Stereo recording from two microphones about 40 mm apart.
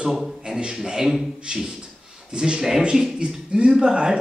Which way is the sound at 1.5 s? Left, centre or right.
Right.